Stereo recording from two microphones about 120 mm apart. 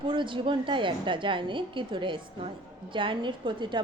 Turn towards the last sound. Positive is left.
turn(degrees=-40)  # may be behind; listen again after turning